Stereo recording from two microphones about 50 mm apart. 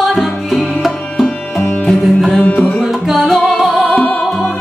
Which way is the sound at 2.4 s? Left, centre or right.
Left.